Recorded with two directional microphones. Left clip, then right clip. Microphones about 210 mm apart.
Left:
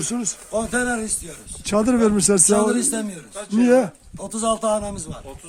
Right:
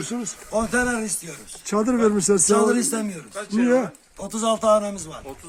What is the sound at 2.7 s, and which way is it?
Speech, centre (ahead or behind).